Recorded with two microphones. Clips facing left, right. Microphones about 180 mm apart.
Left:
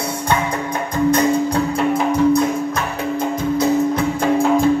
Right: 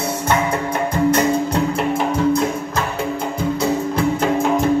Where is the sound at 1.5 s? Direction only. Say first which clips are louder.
Left 1 dB; 25° right (ahead or behind).